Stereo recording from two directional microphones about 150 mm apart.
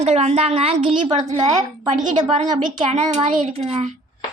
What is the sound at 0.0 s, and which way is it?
Speech, 45° right (ahead or behind).